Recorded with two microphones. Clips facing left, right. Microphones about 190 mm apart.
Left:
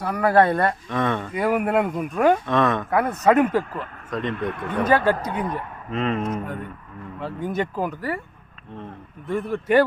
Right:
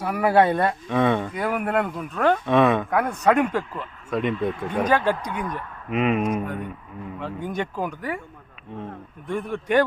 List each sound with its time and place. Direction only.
0.0 s speech: 10° right (ahead or behind)
1.3 s speech: 5° left (ahead or behind)
2.5 s speech: 10° right (ahead or behind)
2.9 s speech: 5° left (ahead or behind)
3.8 s speech: 10° right (ahead or behind)
4.4 s speech: 65° left (ahead or behind)
5.3 s speech: 35° left (ahead or behind)
5.9 s speech: 10° right (ahead or behind)
7.2 s speech: 5° left (ahead or behind)
9.2 s speech: 5° left (ahead or behind)